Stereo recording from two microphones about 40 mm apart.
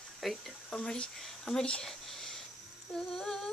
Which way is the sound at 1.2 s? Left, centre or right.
Centre.